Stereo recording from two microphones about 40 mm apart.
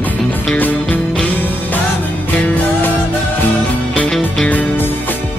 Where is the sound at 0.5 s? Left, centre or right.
Left.